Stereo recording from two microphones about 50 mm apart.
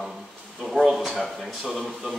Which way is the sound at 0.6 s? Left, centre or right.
Centre.